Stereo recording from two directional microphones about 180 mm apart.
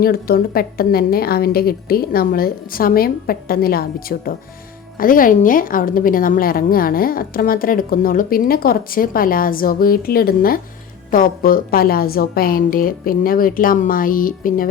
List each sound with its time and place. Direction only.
0.0 s a woman's voice: 55° left (ahead or behind)